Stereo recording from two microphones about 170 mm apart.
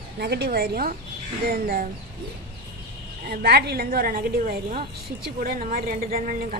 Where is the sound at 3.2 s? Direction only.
70° right (ahead or behind).